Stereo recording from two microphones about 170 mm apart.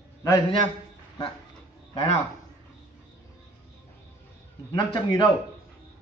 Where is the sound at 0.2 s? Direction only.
25° left (ahead or behind).